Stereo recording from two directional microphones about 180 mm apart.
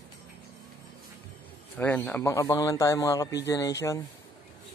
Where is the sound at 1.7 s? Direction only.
10° left (ahead or behind).